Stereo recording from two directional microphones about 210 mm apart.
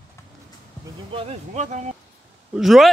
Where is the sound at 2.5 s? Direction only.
Centre (ahead or behind).